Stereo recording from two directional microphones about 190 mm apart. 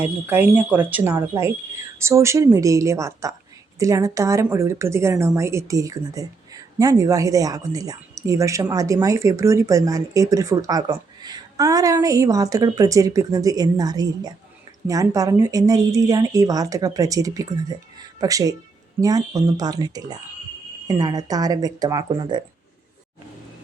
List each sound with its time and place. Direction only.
0.0 s a woman's voice: 10° right (ahead or behind)